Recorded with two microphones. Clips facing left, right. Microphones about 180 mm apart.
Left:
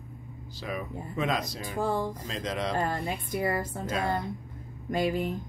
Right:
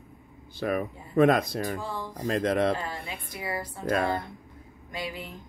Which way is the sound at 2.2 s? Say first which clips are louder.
Right 8 dB; 55° right (ahead or behind).